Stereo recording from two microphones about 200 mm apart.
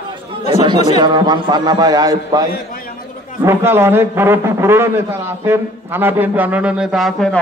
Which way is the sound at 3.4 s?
10° right (ahead or behind).